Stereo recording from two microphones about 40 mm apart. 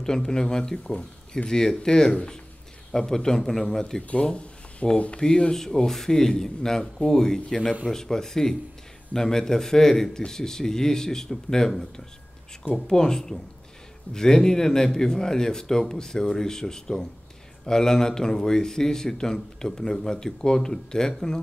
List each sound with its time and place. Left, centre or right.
0.0 s speech: centre
4.1 s speech: left; by 21.4 s centre